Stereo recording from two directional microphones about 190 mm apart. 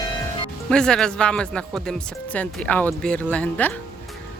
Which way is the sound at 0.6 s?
5° left (ahead or behind).